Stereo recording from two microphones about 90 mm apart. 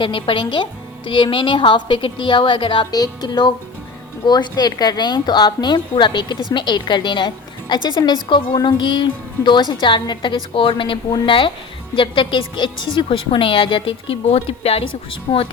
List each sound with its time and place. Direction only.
0.0 s a woman's voice: 70° left (ahead or behind)
2.9 s a woman's voice: 50° left (ahead or behind); by 14.8 s 90° left
15.3 s speech: 75° left (ahead or behind)